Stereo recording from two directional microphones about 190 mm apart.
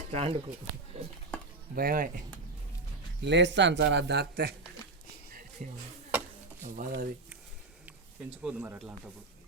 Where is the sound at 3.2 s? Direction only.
70° right (ahead or behind).